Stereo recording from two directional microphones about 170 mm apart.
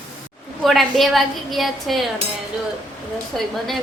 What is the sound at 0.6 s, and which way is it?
A woman's voice, centre (ahead or behind).